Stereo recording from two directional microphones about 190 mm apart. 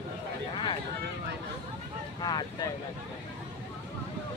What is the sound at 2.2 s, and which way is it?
Boat, 20° left (ahead or behind).